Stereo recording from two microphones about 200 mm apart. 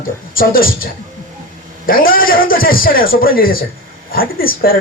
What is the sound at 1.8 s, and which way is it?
Speech, 45° left (ahead or behind).